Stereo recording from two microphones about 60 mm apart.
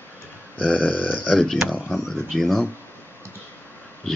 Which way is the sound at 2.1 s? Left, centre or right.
Centre.